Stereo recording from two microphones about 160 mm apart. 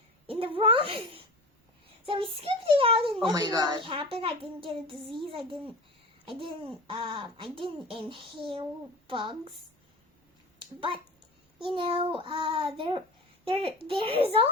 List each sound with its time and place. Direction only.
0.3 s speech: 35° right (ahead or behind)
11.7 s speech: 30° right (ahead or behind)